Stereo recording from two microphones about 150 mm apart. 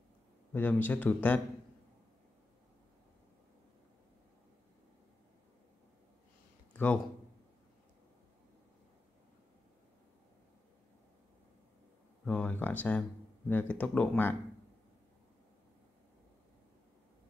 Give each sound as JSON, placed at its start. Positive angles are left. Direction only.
{"t": 0.5, "sound": "speech", "side_deg": 10}
{"t": 6.7, "sound": "a sound", "side_deg": 10}
{"t": 12.3, "sound": "speech", "side_deg": 10}